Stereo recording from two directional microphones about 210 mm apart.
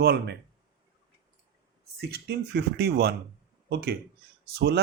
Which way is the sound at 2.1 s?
50° right (ahead or behind).